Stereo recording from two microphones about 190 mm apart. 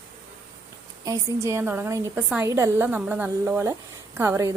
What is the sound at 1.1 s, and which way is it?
A woman's voice, 15° right (ahead or behind).